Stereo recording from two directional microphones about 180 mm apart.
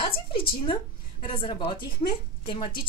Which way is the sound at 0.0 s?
30° left (ahead or behind).